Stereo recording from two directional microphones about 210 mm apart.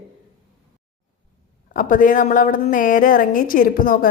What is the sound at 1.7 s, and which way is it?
A woman's voice, 40° left (ahead or behind).